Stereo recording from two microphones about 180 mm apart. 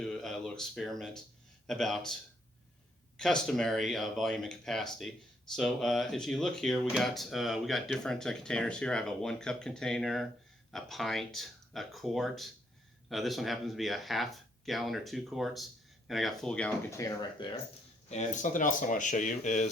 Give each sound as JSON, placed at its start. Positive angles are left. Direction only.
{"t": 0.0, "sound": "a sound", "side_deg": 5}
{"t": 1.6, "sound": "speech", "side_deg": 0}
{"t": 3.2, "sound": "speech", "side_deg": 5}
{"t": 17.0, "sound": "speech", "side_deg": 20}
{"t": 18.1, "sound": "speech", "side_deg": 40}